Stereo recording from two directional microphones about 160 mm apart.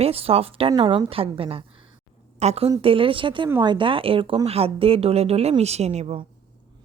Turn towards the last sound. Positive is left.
turn(degrees=-40)  # may be behind; listen again after turning